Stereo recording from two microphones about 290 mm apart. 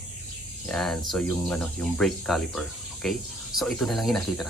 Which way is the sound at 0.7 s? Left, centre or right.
Centre.